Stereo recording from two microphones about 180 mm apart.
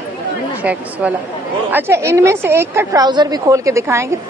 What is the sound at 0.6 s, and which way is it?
A woman's voice, 10° right (ahead or behind).